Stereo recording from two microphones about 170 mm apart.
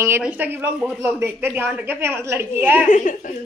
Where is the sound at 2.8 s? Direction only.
45° left (ahead or behind).